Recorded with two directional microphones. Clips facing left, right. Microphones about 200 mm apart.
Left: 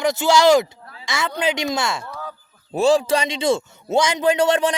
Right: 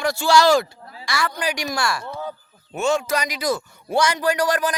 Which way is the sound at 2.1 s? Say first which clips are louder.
Right 3 dB; 25° right (ahead or behind).